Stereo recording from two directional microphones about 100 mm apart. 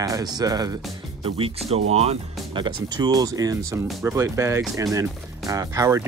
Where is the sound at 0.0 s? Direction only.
35° right (ahead or behind).